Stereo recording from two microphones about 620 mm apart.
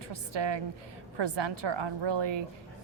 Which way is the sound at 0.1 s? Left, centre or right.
Right.